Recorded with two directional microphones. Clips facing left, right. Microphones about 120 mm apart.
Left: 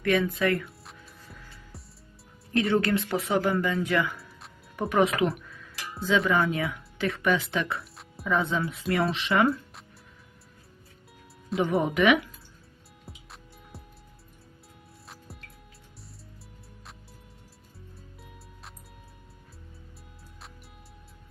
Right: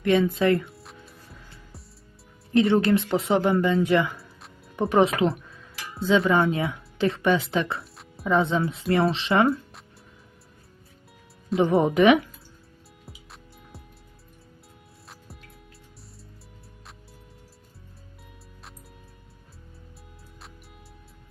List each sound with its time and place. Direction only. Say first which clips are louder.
0.0 s speech: right 4 dB; 25° right (ahead or behind)
0.7 s music: right 3 dB; centre (ahead or behind)
2.5 s speech: right 5 dB; 20° right (ahead or behind)
11.6 s speech: right 5 dB; 30° right (ahead or behind)
13.1 s music: even; centre (ahead or behind)